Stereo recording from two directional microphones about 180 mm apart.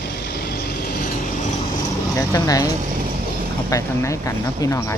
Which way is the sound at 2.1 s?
20° left (ahead or behind).